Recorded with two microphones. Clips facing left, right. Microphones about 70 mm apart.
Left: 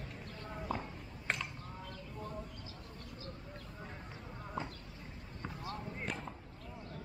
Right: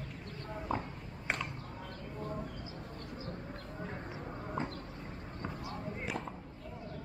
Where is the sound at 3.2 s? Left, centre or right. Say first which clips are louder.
Right 5 dB; right.